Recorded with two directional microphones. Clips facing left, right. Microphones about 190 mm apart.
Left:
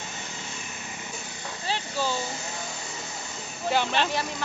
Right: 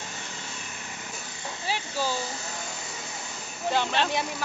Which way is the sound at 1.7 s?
10° right (ahead or behind).